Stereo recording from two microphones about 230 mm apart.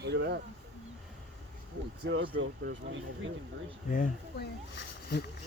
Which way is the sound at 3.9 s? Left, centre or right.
Left.